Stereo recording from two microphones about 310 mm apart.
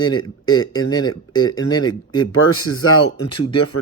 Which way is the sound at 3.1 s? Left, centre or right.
Left.